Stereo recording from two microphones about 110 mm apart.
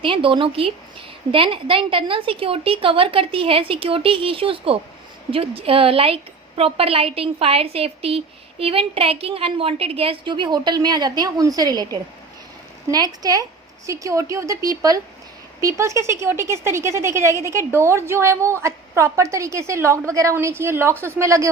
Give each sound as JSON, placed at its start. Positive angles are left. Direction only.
{"t": 0.0, "sound": "a woman's voice", "side_deg": -50}